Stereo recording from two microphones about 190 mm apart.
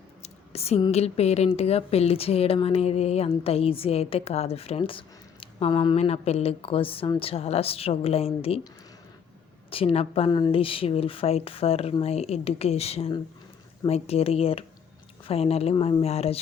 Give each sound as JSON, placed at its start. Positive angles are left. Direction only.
{"t": 0.2, "sound": "speech", "side_deg": 35}
{"t": 9.6, "sound": "speech", "side_deg": 30}